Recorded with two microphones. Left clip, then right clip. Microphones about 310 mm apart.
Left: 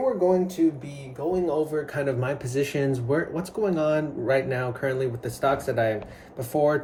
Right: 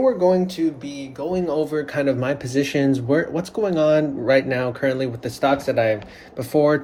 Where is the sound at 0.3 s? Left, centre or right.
Centre.